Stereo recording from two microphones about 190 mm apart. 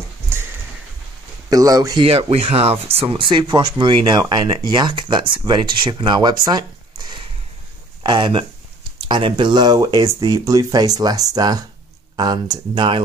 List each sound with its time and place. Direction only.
1.5 s speech: 20° right (ahead or behind)
8.0 s speech: 25° right (ahead or behind)